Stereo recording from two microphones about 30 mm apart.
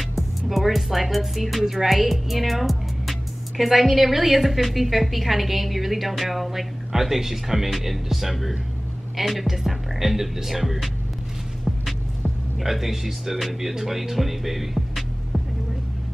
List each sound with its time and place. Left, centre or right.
0.1 s speech: centre
12.5 s speech: centre